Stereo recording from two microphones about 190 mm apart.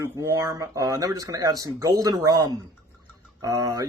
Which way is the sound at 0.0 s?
15° right (ahead or behind).